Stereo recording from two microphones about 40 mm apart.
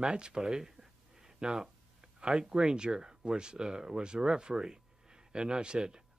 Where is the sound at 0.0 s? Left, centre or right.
Centre.